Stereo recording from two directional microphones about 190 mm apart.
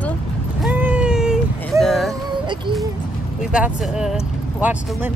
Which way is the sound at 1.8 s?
Centre (ahead or behind).